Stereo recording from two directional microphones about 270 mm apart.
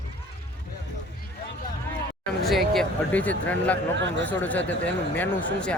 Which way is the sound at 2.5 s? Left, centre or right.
Centre.